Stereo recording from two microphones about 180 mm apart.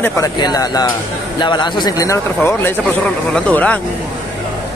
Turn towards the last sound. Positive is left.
turn(degrees=10)  # may be behind; listen again after turning